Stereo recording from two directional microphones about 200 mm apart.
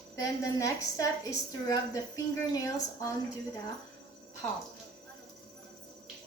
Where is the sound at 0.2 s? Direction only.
15° left (ahead or behind).